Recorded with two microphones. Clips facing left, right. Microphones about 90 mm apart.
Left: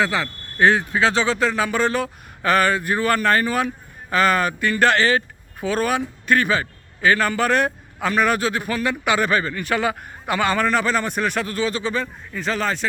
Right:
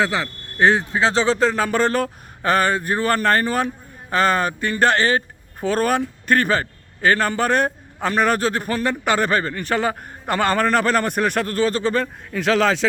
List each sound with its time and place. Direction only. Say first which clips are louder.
0.0 s speech: even; 20° right (ahead or behind); by 2.0 s 40° right (ahead or behind)
2.4 s a man's voice: even; 30° right (ahead or behind)
12.3 s a man's voice: right 6 dB; 80° right